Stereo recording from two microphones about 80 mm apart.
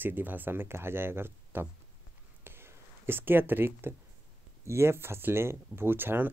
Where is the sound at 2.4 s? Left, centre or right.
Right.